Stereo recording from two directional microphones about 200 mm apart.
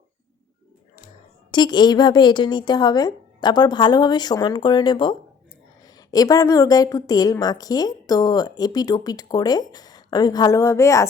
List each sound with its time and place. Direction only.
1.5 s a woman's voice: 20° left (ahead or behind)